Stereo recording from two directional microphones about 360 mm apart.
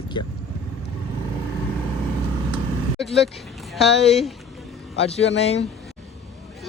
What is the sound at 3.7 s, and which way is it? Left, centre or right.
Speech, centre.